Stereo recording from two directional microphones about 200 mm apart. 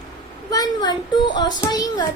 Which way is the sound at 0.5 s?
20° left (ahead or behind).